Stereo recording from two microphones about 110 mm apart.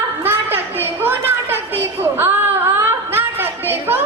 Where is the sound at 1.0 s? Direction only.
20° right (ahead or behind).